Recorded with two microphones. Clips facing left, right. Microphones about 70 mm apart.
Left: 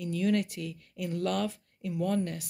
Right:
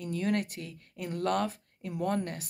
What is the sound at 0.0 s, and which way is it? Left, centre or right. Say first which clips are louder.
Speech: left 2 dB; right.